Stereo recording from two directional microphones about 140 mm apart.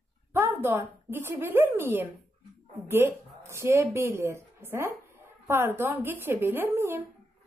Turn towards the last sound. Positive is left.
turn(degrees=-20)  # may be behind; listen again after turning